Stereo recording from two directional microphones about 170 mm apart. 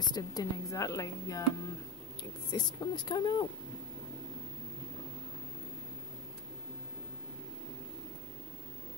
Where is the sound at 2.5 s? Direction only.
25° left (ahead or behind).